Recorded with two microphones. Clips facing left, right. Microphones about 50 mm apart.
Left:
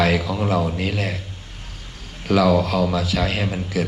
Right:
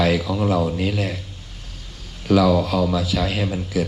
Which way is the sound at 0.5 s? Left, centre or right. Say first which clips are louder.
Even; left.